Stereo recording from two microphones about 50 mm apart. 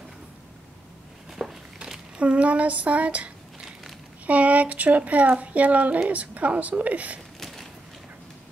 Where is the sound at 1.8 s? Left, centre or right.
Right.